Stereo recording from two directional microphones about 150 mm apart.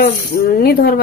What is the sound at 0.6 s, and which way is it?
Speech, 85° left.